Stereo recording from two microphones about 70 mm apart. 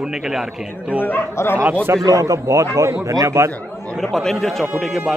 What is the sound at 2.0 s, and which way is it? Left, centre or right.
A man's voice, right.